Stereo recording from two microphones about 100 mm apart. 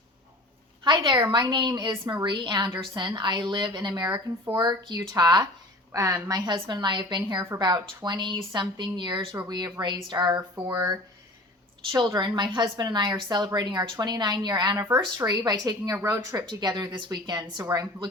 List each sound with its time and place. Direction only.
0.9 s a woman's voice: 45° right (ahead or behind)
14.8 s speech: 25° right (ahead or behind)
15.3 s a woman's voice: 40° right (ahead or behind)
16.5 s a woman's voice: 45° right (ahead or behind)